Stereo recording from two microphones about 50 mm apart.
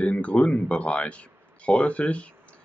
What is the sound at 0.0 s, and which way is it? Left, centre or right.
Speech, left.